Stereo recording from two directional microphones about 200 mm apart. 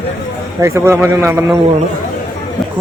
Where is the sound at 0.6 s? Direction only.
15° right (ahead or behind).